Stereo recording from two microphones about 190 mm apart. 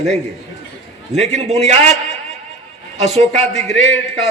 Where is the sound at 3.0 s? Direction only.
35° right (ahead or behind).